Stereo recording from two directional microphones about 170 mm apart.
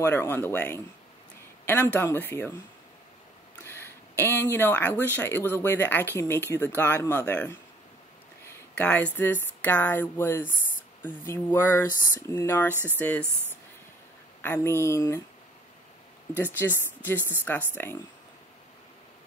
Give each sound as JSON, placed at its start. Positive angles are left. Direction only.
{"t": 0.0, "sound": "speech", "side_deg": 10}
{"t": 2.0, "sound": "speech", "side_deg": 15}
{"t": 3.6, "sound": "speech", "side_deg": 15}
{"t": 12.7, "sound": "speech", "side_deg": -10}
{"t": 14.4, "sound": "speech", "side_deg": 15}
{"t": 16.5, "sound": "speech", "side_deg": 10}